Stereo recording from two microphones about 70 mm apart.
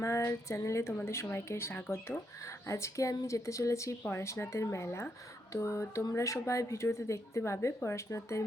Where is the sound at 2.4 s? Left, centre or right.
Left.